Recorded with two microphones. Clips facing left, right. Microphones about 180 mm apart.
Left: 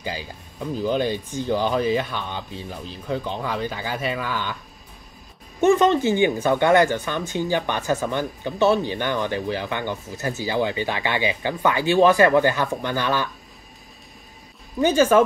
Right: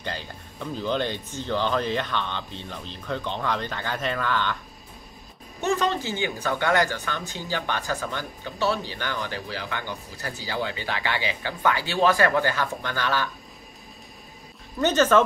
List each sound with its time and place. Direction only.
0.0 s speech: 10° left (ahead or behind)
5.6 s speech: 20° left (ahead or behind)
14.8 s speech: 10° left (ahead or behind)